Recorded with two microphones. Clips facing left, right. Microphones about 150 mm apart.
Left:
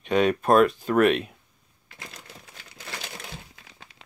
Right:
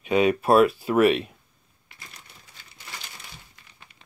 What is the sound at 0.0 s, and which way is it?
Speech, 5° right (ahead or behind).